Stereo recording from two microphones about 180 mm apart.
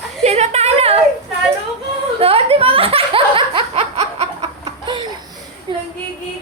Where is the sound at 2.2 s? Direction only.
35° right (ahead or behind).